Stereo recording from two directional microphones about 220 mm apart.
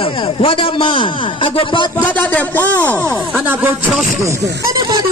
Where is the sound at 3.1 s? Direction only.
10° right (ahead or behind).